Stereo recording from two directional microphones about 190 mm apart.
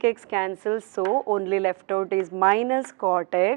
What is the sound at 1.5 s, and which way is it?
A woman's voice, 10° right (ahead or behind).